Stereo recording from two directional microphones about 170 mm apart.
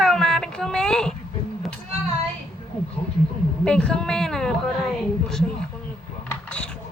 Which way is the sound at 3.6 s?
5° left (ahead or behind).